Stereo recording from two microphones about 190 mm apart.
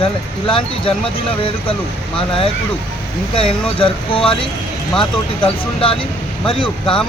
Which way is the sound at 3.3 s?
30° left (ahead or behind).